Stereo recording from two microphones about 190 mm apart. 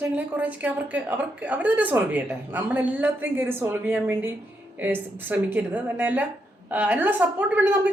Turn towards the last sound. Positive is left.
turn(degrees=-10)  # may be behind; listen again after turning